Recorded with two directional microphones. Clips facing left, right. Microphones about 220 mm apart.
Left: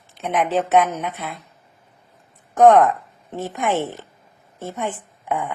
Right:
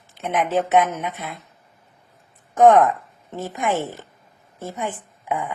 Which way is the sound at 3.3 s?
15° left (ahead or behind).